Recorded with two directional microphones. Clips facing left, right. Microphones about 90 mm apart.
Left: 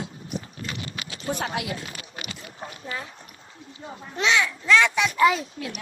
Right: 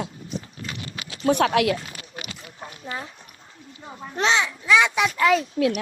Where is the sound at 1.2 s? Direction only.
75° right (ahead or behind).